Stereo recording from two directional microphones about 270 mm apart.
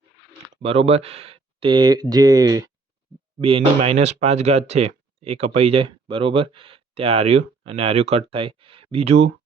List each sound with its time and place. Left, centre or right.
0.6 s speech: right